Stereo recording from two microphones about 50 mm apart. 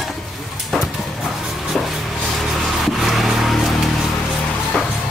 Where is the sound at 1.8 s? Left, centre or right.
Centre.